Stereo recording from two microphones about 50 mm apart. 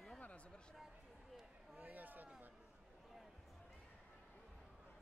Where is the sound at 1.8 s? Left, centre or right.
Right.